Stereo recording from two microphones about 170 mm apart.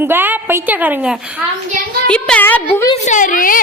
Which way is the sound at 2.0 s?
5° left (ahead or behind).